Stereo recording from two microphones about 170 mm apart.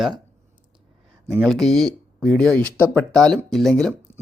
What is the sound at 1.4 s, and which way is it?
Speech, centre (ahead or behind).